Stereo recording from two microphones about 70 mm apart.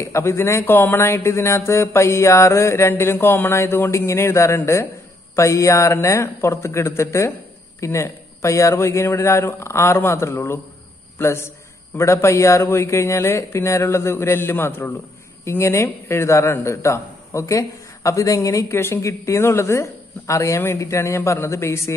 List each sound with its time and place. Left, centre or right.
0.0 s a man's voice: left